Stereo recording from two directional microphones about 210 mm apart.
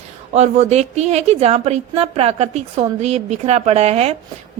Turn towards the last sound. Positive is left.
turn(degrees=-30)  # may be behind; listen again after turning